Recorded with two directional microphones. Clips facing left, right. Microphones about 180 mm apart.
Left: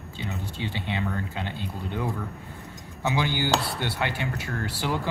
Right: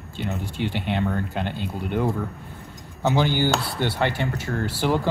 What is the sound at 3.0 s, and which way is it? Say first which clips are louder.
Speech: right 5 dB; 65° right (ahead or behind).